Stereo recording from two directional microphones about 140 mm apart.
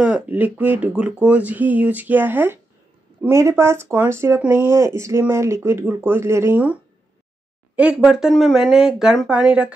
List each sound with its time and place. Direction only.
0.0 s speech: 10° right (ahead or behind)